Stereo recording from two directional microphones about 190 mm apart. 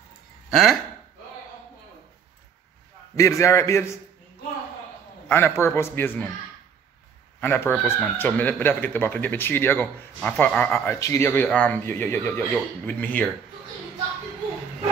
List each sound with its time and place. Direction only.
0.5 s speech: centre (ahead or behind)
3.2 s speech: 15° left (ahead or behind)
5.3 s speech: 10° left (ahead or behind)
7.3 s speech: 10° left (ahead or behind)